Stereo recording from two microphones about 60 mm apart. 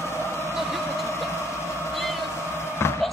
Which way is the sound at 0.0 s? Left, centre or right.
Left.